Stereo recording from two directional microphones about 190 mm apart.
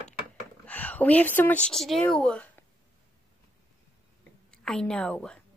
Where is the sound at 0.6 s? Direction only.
10° left (ahead or behind).